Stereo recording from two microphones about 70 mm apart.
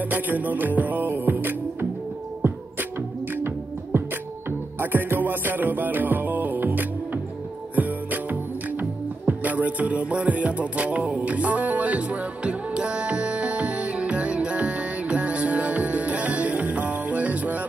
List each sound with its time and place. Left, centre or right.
0.0 s music: right